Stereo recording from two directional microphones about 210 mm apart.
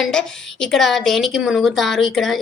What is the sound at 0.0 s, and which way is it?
A woman's voice, 5° left (ahead or behind).